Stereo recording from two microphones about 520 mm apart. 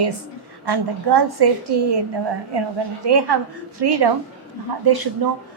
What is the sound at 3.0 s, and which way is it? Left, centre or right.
A woman's voice, right.